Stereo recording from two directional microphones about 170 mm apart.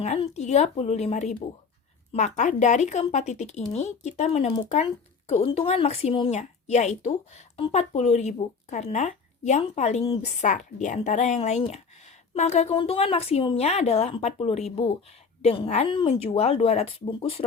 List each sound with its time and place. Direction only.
0.0 s a woman's voice: 40° left (ahead or behind)